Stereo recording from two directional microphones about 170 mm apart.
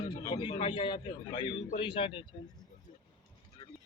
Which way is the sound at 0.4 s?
30° left (ahead or behind).